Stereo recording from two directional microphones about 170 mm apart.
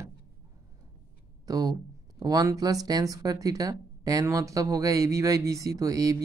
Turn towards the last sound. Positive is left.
turn(degrees=-20)  # may be behind; listen again after turning